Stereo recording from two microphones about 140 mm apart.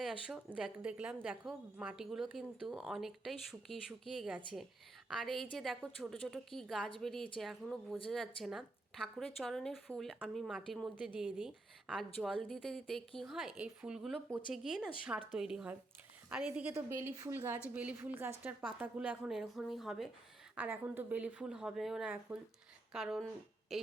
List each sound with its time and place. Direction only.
0.0 s a woman's voice: 5° right (ahead or behind)
20.6 s a woman's voice: 15° right (ahead or behind)